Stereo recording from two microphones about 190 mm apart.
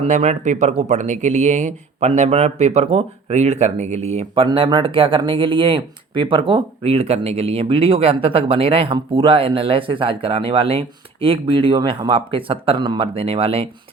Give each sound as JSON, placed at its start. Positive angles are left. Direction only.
{"t": 0.0, "sound": "speech", "side_deg": -35}